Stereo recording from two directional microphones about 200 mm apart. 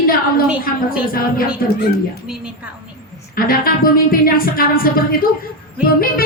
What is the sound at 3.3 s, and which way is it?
A woman's voice, 45° left (ahead or behind).